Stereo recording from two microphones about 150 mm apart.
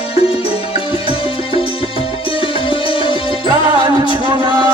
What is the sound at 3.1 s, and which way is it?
Music, 35° left (ahead or behind).